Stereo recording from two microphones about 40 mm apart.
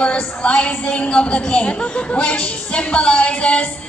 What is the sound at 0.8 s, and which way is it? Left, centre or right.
A woman's voice, left.